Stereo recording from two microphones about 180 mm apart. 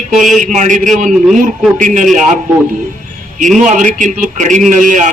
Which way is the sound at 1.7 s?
45° right (ahead or behind).